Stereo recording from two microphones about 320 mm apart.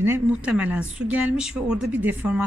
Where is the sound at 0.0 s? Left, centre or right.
Centre.